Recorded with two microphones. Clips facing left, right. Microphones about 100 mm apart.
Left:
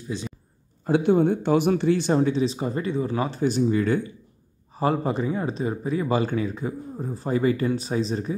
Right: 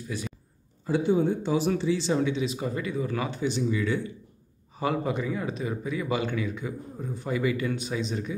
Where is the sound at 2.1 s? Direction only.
35° left (ahead or behind).